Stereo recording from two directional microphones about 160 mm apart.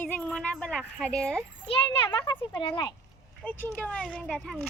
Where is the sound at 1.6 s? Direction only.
30° left (ahead or behind).